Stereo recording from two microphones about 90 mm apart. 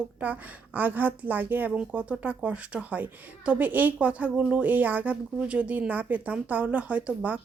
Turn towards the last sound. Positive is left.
turn(degrees=-15)  # may be behind; listen again after turning